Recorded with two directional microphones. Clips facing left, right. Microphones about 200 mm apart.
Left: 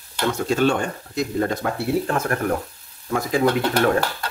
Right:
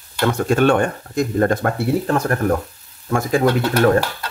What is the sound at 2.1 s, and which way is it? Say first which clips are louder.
Speech: right 4 dB; 35° right (ahead or behind).